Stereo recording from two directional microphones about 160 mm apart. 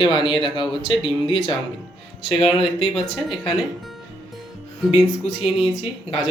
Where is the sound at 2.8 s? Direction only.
Centre (ahead or behind).